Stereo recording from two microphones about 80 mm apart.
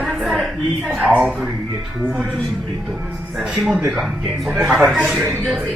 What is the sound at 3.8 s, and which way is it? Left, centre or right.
Speech, right.